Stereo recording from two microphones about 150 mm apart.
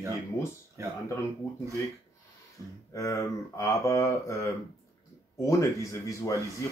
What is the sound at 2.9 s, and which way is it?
A man's voice, 20° left (ahead or behind).